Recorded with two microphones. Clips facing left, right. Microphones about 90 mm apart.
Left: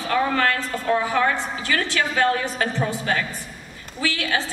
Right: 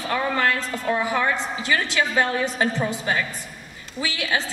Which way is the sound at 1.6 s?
20° right (ahead or behind).